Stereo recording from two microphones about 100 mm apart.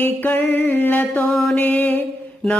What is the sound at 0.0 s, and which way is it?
Music, 20° left (ahead or behind).